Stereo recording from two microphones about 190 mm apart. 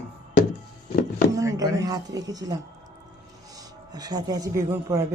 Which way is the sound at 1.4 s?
15° right (ahead or behind).